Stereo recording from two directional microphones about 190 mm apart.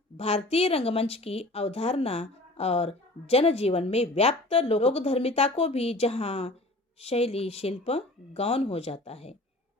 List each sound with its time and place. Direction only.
0.2 s speech: 30° left (ahead or behind)